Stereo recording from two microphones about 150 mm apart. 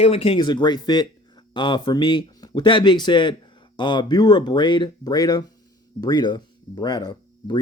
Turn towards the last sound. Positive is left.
turn(degrees=30)  # may be behind; listen again after turning